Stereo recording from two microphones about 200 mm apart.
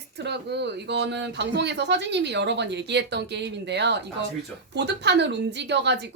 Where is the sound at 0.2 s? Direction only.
60° right (ahead or behind).